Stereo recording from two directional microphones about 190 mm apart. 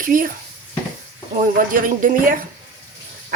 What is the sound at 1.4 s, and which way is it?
Speech, 45° right (ahead or behind).